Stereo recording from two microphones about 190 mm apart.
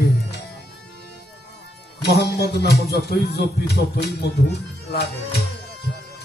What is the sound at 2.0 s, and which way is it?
Speech, 60° left (ahead or behind).